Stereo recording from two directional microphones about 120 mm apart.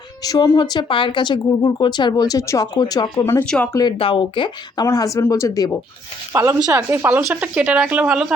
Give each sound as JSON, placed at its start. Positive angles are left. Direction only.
{"t": 0.2, "sound": "speech", "side_deg": 30}
{"t": 3.4, "sound": "speech", "side_deg": 5}
{"t": 3.9, "sound": "speech", "side_deg": 45}
{"t": 4.9, "sound": "speech", "side_deg": 30}
{"t": 6.3, "sound": "a woman's voice", "side_deg": -20}